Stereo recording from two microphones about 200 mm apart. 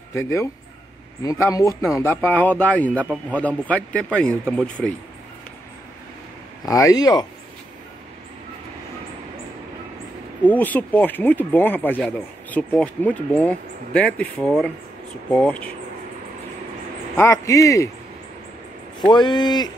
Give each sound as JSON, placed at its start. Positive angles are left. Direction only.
{"t": 0.1, "sound": "speech", "side_deg": 15}
{"t": 6.6, "sound": "speech", "side_deg": 15}
{"t": 10.4, "sound": "speech", "side_deg": 10}
{"t": 17.2, "sound": "speech", "side_deg": 15}
{"t": 18.9, "sound": "speech", "side_deg": 20}